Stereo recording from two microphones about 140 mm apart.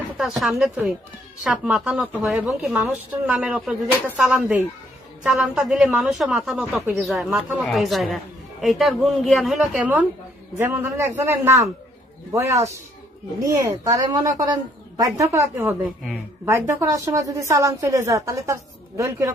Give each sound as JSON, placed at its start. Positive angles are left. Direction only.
{"t": 0.2, "sound": "a woman's voice", "side_deg": 0}
{"t": 10.6, "sound": "a woman's voice", "side_deg": -20}